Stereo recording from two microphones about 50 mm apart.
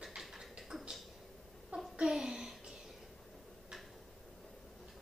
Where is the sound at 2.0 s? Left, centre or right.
Centre.